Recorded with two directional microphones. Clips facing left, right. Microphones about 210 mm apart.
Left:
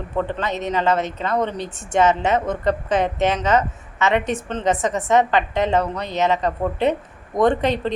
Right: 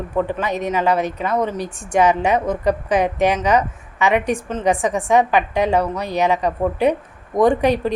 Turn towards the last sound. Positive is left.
turn(degrees=-10)  # may be behind; listen again after turning